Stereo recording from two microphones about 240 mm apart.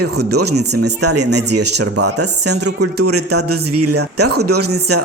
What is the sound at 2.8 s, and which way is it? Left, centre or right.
Speech, right.